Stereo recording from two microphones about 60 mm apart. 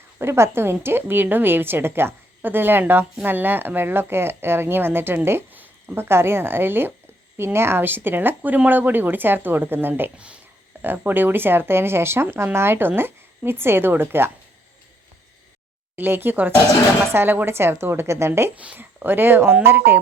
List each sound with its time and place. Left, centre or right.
0.2 s speech: right
10.2 s speech: centre
10.8 s speech: right
16.0 s a woman's voice: right
18.5 s speech: right
18.8 s speech: right